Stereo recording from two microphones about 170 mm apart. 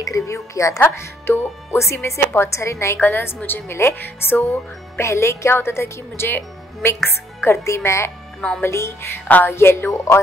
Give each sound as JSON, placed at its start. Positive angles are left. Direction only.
{"t": 0.0, "sound": "speech", "side_deg": 20}